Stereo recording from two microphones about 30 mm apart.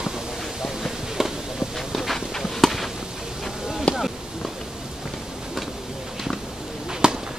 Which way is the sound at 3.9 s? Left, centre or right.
Left.